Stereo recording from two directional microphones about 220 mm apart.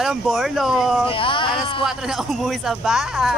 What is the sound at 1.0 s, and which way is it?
Speech, 25° left (ahead or behind).